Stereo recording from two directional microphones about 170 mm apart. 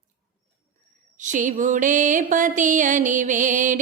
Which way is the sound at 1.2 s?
50° right (ahead or behind).